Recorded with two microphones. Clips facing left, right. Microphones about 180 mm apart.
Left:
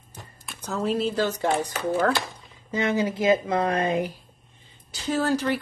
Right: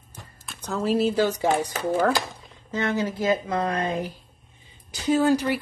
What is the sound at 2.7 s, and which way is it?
Speech, 15° left (ahead or behind).